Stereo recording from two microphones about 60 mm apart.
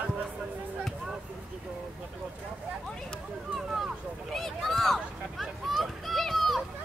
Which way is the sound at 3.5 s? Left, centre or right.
Centre.